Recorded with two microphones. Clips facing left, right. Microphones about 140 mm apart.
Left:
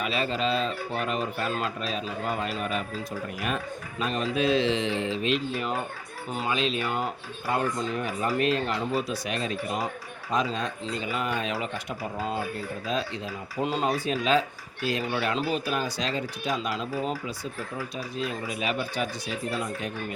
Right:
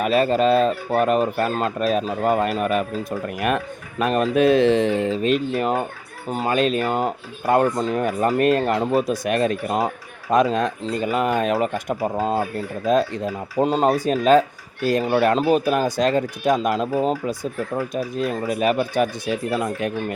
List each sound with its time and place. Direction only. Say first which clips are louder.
0.0 s speech: right 10 dB; 50° right (ahead or behind)